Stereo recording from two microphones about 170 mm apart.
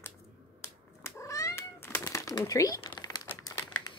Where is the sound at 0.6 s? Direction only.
15° left (ahead or behind).